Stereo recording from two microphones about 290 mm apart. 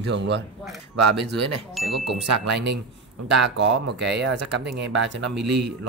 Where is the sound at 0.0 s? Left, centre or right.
Right.